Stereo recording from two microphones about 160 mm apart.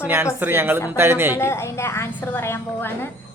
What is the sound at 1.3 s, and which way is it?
A woman's voice, 15° left (ahead or behind).